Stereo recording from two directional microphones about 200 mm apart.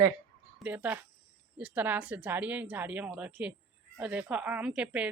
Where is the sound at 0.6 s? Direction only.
10° right (ahead or behind).